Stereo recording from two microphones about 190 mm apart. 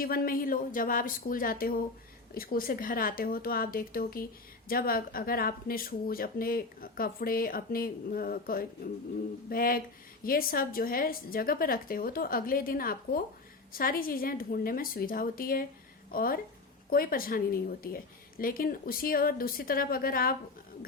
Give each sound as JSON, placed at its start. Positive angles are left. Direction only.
{"t": 0.0, "sound": "speech", "side_deg": 50}